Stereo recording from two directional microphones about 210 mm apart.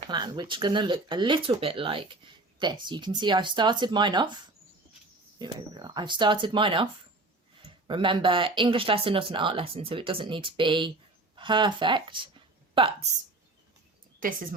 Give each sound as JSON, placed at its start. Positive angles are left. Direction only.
{"t": 0.0, "sound": "speech", "side_deg": -20}
{"t": 5.4, "sound": "speech", "side_deg": -20}
{"t": 14.2, "sound": "speech", "side_deg": -40}